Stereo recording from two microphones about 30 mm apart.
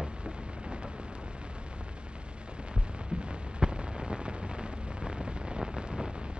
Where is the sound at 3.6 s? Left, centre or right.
Right.